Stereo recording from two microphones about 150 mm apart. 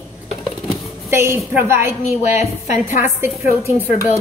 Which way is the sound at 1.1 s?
15° right (ahead or behind).